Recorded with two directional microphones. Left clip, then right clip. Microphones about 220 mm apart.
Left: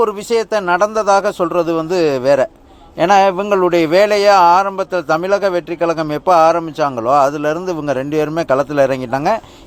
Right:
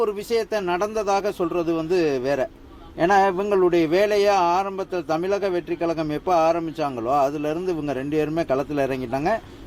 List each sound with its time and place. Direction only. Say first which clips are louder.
0.0 s a man's voice: left 7 dB; 15° left (ahead or behind)